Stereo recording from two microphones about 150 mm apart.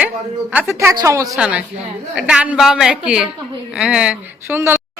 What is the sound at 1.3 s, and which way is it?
A woman's voice, 5° right (ahead or behind).